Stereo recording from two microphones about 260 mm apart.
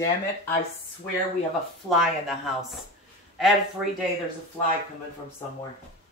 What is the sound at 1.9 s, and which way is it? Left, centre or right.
Speech, centre.